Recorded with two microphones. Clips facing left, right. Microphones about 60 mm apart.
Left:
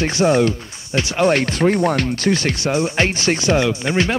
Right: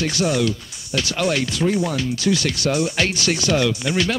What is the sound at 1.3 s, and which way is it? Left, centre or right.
Speech, left.